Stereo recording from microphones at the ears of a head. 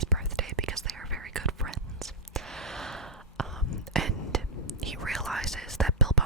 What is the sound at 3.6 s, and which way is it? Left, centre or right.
Whispering, left.